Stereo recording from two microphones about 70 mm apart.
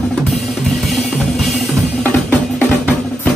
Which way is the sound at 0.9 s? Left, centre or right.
Centre.